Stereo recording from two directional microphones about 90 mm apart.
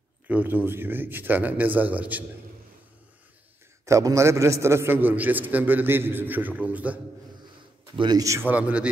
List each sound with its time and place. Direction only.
0.3 s a man's voice: 20° right (ahead or behind)
3.8 s a man's voice: 35° right (ahead or behind); by 7.0 s 15° right (ahead or behind)
7.9 s a man's voice: 65° right (ahead or behind)
8.4 s a man's voice: 20° right (ahead or behind)